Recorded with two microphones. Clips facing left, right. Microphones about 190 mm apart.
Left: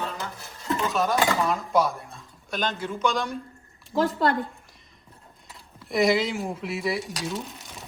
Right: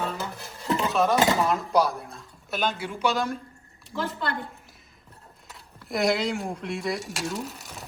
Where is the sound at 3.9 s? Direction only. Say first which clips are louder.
Left 7 dB; 40° left (ahead or behind).